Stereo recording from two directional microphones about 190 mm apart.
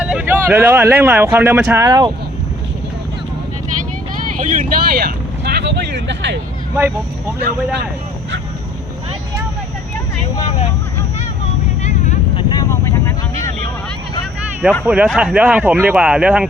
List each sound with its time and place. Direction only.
0.0 s speech: 5° right (ahead or behind)
4.4 s speech: 45° right (ahead or behind); by 6.4 s 65° right (ahead or behind)
11.8 s vehicle: 40° left (ahead or behind)
12.4 s vehicle: 20° left (ahead or behind)
14.6 s speech: 5° right (ahead or behind)